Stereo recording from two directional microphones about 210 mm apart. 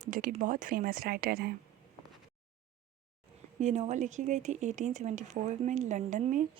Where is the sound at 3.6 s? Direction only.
35° right (ahead or behind).